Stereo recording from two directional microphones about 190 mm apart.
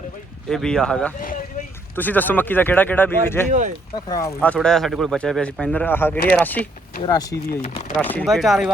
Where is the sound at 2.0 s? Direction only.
10° left (ahead or behind).